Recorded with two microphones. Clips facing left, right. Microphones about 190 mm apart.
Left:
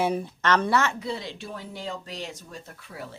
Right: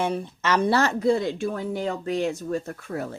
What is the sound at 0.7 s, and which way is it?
Speech, 35° right (ahead or behind).